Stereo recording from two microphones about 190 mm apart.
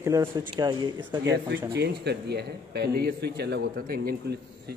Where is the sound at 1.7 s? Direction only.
60° right (ahead or behind).